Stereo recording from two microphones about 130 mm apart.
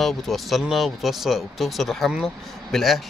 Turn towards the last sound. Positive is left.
turn(degrees=0)  # may be behind; listen again after turning